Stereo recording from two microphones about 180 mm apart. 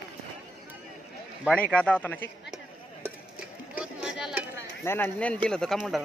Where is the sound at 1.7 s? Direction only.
10° left (ahead or behind).